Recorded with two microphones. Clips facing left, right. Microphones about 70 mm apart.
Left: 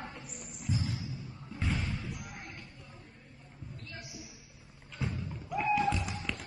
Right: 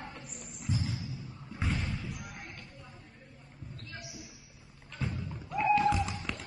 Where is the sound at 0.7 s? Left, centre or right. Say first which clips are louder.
Even; centre.